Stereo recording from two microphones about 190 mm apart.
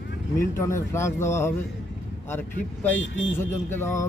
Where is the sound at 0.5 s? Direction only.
15° left (ahead or behind).